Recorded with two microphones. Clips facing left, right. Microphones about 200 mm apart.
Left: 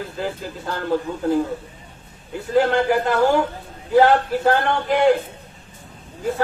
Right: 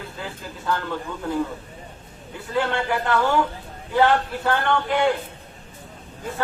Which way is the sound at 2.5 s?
40° left (ahead or behind).